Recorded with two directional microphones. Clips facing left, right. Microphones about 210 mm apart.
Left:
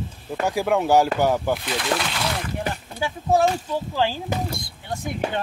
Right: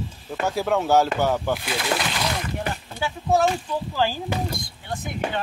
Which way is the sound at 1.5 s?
5° right (ahead or behind).